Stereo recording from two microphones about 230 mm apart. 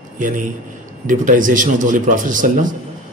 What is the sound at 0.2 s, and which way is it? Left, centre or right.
A man's voice, right.